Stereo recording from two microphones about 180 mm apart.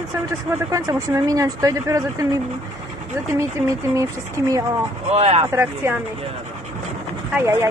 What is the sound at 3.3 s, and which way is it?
Speech, 15° right (ahead or behind).